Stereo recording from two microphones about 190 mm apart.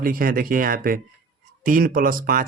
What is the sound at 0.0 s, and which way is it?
Speech, 50° right (ahead or behind).